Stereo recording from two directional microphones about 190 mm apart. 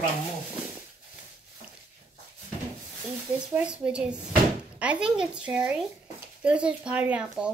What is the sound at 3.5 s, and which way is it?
A woman's voice, 5° right (ahead or behind).